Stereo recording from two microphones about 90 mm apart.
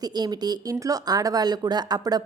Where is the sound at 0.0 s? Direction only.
50° right (ahead or behind).